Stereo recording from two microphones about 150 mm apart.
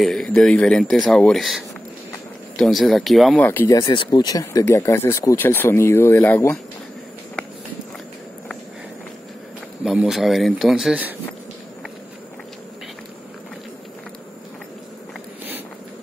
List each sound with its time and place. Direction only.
0.0 s speech: centre (ahead or behind)
3.4 s speech: 15° left (ahead or behind)
3.7 s speech: 30° left (ahead or behind); by 6.6 s 10° left (ahead or behind)
9.8 s speech: centre (ahead or behind)